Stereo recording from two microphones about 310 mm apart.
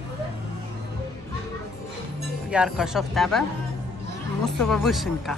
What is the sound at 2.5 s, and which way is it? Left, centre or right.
Speech, centre.